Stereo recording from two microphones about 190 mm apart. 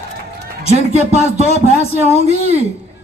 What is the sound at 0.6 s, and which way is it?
Speech, 35° right (ahead or behind).